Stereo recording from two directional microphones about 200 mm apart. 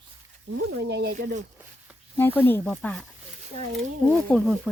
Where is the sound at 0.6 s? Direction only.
90° right.